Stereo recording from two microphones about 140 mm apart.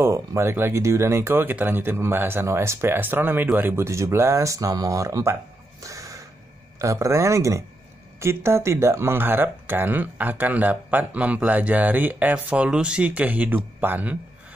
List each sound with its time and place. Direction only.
0.0 s a man's voice: 20° right (ahead or behind)